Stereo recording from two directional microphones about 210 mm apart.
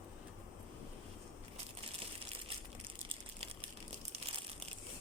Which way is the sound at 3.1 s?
25° right (ahead or behind).